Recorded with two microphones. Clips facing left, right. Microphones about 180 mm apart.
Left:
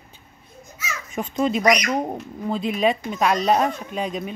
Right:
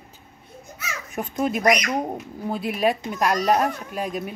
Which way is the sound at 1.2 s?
10° right (ahead or behind).